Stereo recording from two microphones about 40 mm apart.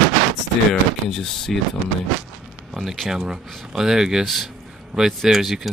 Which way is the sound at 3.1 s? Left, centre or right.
Centre.